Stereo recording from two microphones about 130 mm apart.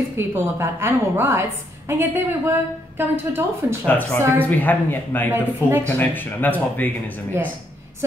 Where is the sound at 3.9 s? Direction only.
15° left (ahead or behind).